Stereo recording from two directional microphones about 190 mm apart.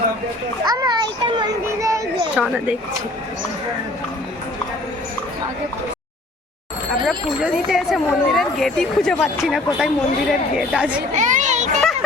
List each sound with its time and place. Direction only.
0.6 s children playing: 20° right (ahead or behind)
2.4 s speech: 5° right (ahead or behind)
7.0 s a sound: centre (ahead or behind)
9.7 s a woman's voice: 5° right (ahead or behind)
11.1 s children playing: 40° right (ahead or behind)